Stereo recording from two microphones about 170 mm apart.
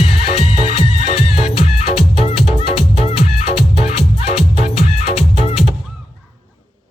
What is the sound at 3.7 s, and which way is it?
Music, 35° left (ahead or behind).